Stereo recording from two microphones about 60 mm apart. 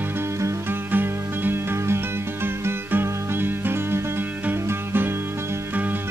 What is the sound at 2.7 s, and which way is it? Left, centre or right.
Music, right.